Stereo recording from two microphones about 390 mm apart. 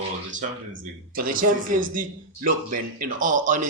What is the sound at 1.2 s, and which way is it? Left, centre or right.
Speech, right.